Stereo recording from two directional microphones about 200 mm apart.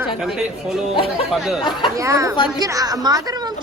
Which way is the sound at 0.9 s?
25° left (ahead or behind).